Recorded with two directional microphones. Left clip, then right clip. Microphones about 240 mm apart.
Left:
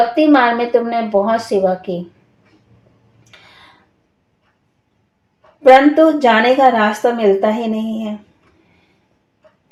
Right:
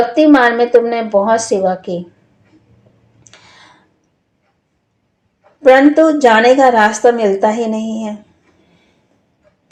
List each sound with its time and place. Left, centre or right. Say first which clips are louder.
0.2 s a woman's voice: right 6 dB; right
5.6 s a woman's voice: even; right